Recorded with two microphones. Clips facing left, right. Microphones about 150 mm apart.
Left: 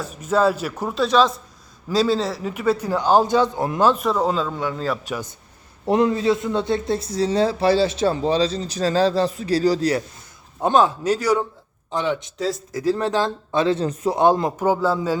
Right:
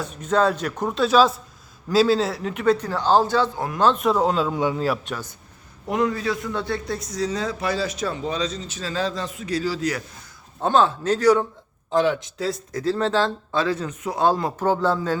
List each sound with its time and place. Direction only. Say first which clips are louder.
0.0 s a man's voice: left 1 dB; 5° left (ahead or behind); by 3.8 s 20° left (ahead or behind)
3.8 s a man's voice: left 1 dB; 10° left (ahead or behind)
4.0 s speech: right 1 dB; centre (ahead or behind)
5.0 s a man's voice: left 3 dB; 10° left (ahead or behind)
5.8 s a man's voice: left 5 dB; 30° left (ahead or behind)
10.6 s a man's voice: left 2 dB; 15° left (ahead or behind)
11.9 s speech: right 3 dB; centre (ahead or behind)
12.8 s speech: left 1 dB; 15° left (ahead or behind); by 14.2 s 35° left (ahead or behind)
14.2 s a man's voice: left 2 dB; 20° left (ahead or behind)